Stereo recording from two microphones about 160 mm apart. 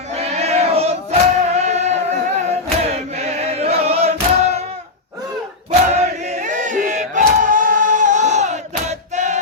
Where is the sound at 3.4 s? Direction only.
40° right (ahead or behind).